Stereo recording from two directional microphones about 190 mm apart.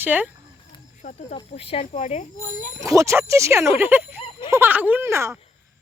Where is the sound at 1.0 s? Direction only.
30° left (ahead or behind).